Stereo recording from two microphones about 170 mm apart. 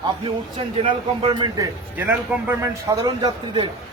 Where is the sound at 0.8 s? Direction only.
30° right (ahead or behind).